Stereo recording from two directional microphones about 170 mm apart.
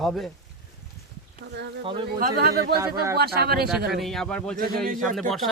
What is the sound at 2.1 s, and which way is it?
Speech, 60° right (ahead or behind).